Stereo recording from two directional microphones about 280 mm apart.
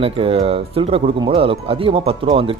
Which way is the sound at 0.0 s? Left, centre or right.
Centre.